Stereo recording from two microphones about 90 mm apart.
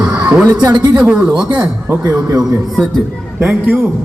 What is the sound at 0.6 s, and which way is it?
Speech, 50° right (ahead or behind).